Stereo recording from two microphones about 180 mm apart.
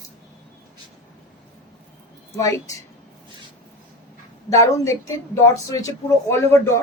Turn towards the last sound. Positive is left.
turn(degrees=15)  # may be behind; listen again after turning